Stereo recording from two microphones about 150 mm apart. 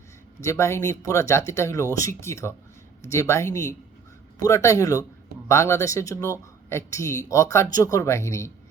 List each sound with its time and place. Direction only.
0.4 s speech: 20° left (ahead or behind)